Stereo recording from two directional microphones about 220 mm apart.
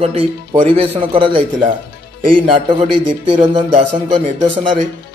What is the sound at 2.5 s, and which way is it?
Speech, 25° right (ahead or behind).